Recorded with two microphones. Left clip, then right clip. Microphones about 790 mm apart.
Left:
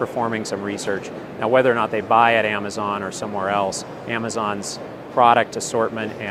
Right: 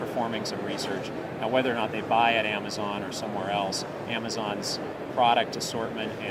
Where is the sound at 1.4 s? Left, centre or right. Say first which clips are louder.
Left 9 dB; left.